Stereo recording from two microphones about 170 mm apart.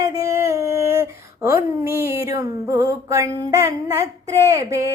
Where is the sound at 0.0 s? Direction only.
20° right (ahead or behind).